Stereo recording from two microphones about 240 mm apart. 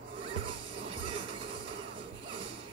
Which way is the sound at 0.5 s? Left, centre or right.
Right.